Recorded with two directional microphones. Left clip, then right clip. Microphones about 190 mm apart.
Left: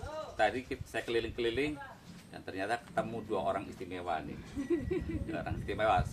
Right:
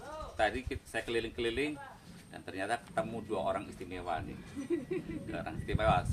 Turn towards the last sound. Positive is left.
turn(degrees=-15)  # may be behind; listen again after turning